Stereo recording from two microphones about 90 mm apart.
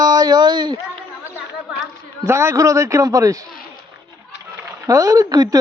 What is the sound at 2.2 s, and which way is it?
A man's voice, 30° right (ahead or behind).